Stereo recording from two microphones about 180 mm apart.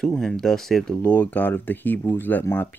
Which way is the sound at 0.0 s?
5° left (ahead or behind).